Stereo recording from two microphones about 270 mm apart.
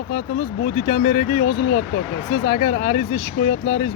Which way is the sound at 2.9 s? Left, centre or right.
Left.